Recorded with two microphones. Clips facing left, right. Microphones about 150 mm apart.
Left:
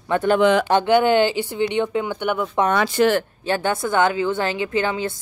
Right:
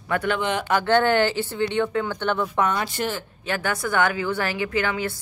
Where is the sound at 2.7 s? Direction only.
90° left.